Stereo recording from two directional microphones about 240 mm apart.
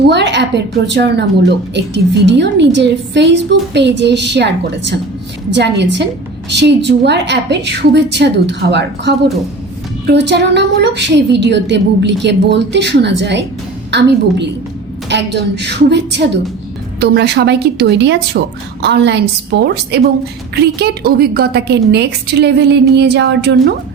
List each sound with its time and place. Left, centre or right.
0.0 s a woman's voice: right
15.1 s a woman's voice: right